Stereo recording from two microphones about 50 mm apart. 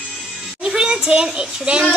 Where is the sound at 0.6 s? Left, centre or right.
Centre.